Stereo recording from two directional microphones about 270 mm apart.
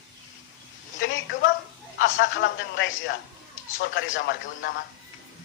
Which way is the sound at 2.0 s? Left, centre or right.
Left.